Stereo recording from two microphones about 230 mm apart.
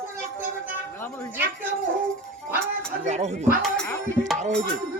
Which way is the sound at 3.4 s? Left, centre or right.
Centre.